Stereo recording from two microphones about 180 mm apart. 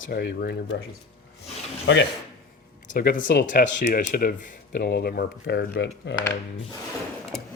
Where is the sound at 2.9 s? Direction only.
50° left (ahead or behind).